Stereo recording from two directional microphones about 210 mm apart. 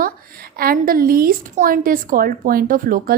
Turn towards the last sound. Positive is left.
turn(degrees=-40)  # may be behind; listen again after turning